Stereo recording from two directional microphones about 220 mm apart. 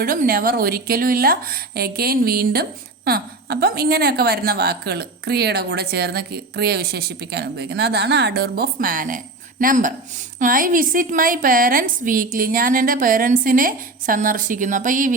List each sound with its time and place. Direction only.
0.0 s a woman's voice: 40° right (ahead or behind)